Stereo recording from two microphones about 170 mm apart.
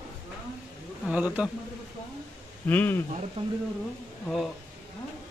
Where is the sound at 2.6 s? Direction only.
10° left (ahead or behind).